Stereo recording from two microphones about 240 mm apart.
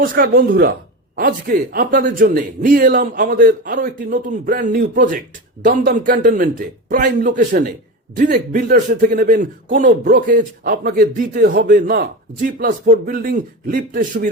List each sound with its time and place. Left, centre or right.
0.0 s a man's voice: right